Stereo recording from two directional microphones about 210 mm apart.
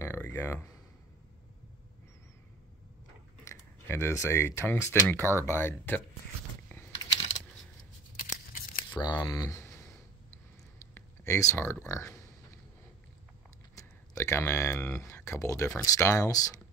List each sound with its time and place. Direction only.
0.0 s a sound: 10° left (ahead or behind)
3.4 s speech: 10° left (ahead or behind)
6.7 s a sound: 10° left (ahead or behind)
8.9 s speech: 20° left (ahead or behind)
11.0 s speech: 15° left (ahead or behind)
13.7 s speech: 10° left (ahead or behind)